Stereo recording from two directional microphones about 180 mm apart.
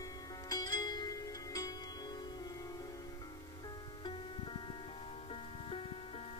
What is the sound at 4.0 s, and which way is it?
Music, 25° left (ahead or behind).